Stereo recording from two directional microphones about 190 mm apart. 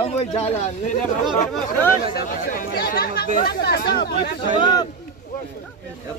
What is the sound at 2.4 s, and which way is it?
Speech, 45° left (ahead or behind).